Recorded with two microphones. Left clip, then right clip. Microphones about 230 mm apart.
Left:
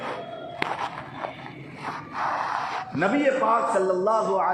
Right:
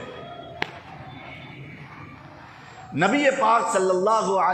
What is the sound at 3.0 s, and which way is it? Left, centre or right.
A man's voice, right.